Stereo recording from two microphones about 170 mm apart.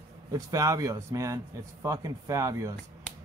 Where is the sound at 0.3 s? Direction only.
20° right (ahead or behind).